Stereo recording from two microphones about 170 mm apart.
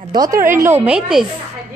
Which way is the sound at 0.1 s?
20° right (ahead or behind).